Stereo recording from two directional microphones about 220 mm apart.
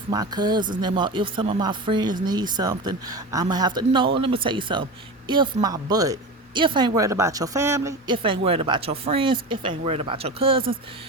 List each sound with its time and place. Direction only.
0.1 s speech: 15° right (ahead or behind)